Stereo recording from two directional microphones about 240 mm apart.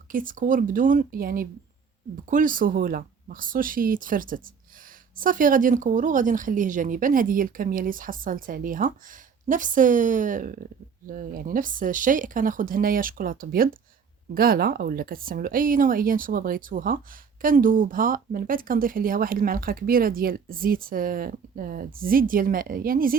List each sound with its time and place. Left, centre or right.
0.1 s speech: right